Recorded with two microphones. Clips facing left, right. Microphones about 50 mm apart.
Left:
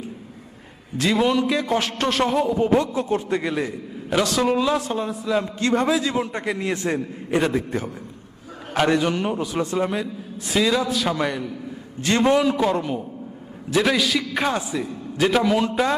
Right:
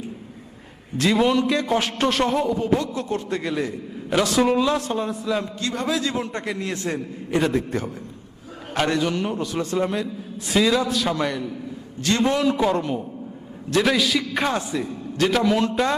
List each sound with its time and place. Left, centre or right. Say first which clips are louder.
0.9 s a man's voice: right 1 dB; centre
2.6 s a man's voice: left 3 dB; left
2.9 s a man's voice: left 3 dB; centre
4.1 s a man's voice: right 1 dB; centre
5.5 s a man's voice: left 6 dB; left
5.9 s a man's voice: left 2 dB; centre
11.9 s a man's voice: left 1 dB; left
12.3 s a man's voice: left 1 dB; centre